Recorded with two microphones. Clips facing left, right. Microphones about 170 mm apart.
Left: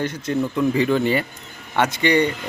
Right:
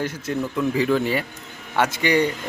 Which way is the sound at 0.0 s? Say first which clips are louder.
Left 3 dB; 5° right (ahead or behind).